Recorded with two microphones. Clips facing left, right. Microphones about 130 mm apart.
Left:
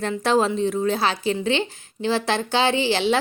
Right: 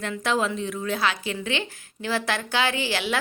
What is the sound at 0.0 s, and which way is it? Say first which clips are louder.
Speech: left 5 dB; 35° left (ahead or behind).